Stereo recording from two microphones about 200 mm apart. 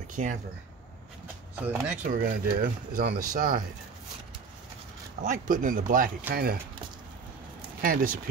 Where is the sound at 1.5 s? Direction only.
10° right (ahead or behind).